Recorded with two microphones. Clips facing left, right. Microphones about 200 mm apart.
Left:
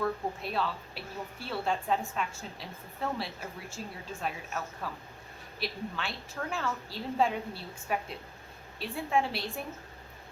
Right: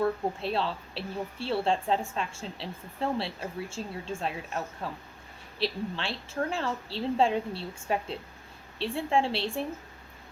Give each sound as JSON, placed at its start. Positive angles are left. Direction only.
{"t": 0.0, "sound": "speech", "side_deg": -30}